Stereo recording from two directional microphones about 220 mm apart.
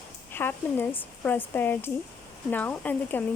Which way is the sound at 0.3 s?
10° left (ahead or behind).